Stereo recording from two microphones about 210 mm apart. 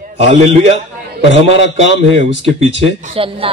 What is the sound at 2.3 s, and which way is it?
Speech, 60° left (ahead or behind).